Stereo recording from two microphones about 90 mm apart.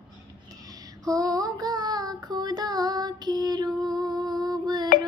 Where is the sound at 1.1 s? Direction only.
40° right (ahead or behind).